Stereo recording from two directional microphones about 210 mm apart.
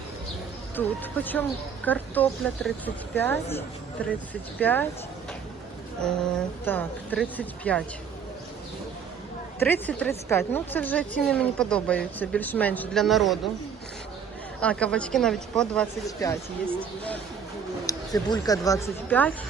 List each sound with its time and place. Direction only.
0.8 s a woman's voice: 10° left (ahead or behind)
4.6 s a woman's voice: 10° left (ahead or behind)
6.0 s a woman's voice: 5° left (ahead or behind)
9.6 s a woman's voice: 10° left (ahead or behind)
14.6 s speech: 5° left (ahead or behind)
16.0 s a woman's voice: 15° left (ahead or behind)
17.8 s a woman's voice: 15° left (ahead or behind)